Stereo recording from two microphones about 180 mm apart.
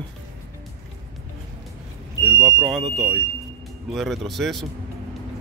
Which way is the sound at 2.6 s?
Centre (ahead or behind).